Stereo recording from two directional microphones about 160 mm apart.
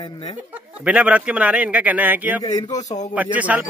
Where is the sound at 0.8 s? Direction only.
5° right (ahead or behind).